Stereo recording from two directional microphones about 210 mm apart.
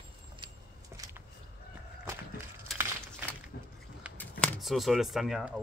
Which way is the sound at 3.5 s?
50° left (ahead or behind).